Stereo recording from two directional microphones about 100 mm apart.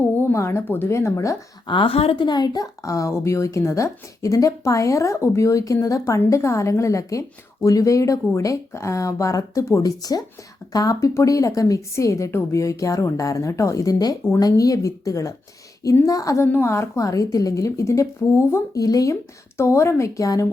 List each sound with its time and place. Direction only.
0.0 s speech: 20° left (ahead or behind)
1.6 s speech: 55° left (ahead or behind); by 2.2 s 75° left (ahead or behind)
2.2 s speech: 45° left (ahead or behind)